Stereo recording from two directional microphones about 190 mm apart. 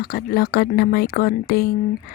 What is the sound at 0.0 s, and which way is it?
Speech, 50° left (ahead or behind).